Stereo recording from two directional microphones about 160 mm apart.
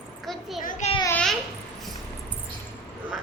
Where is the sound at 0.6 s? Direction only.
55° left (ahead or behind).